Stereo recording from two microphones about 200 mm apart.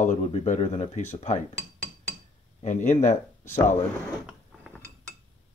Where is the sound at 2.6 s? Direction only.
35° left (ahead or behind).